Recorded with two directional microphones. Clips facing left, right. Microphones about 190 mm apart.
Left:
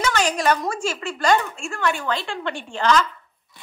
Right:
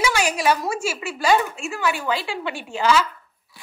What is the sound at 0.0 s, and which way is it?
A woman's voice, 10° right (ahead or behind).